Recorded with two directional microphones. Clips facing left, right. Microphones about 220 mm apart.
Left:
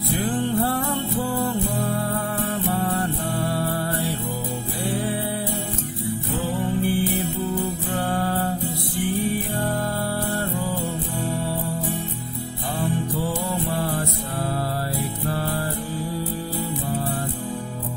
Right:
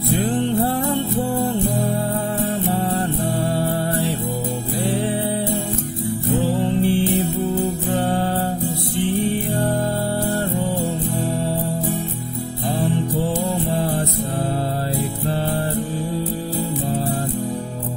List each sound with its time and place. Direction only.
0.1 s music: 20° right (ahead or behind)
2.7 s music: 25° right (ahead or behind)
6.6 s music: 25° right (ahead or behind)
13.7 s music: 25° right (ahead or behind)